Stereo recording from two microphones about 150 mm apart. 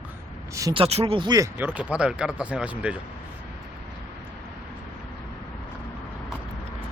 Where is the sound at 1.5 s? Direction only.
10° right (ahead or behind).